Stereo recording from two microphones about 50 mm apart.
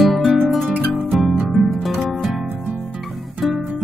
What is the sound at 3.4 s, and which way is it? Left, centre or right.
Music, centre.